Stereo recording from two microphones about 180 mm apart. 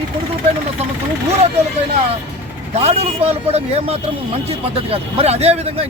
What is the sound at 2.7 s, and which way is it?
Speech, 35° right (ahead or behind).